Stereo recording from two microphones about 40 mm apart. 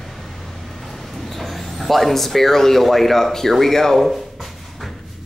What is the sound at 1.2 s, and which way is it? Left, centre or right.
Speech, centre.